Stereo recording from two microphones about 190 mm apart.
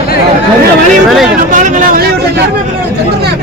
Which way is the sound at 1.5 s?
45° right (ahead or behind).